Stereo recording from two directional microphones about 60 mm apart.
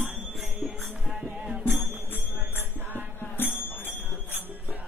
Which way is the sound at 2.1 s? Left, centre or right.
Right.